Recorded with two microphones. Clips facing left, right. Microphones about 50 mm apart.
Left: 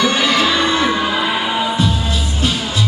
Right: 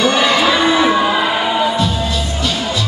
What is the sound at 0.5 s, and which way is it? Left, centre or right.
Music, centre.